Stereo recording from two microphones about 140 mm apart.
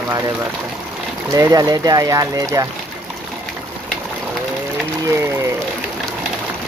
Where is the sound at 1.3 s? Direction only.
25° right (ahead or behind).